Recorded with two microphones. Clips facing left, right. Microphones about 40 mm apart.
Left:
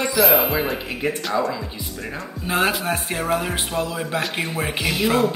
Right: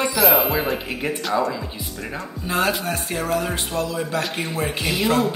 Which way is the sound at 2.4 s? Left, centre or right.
Centre.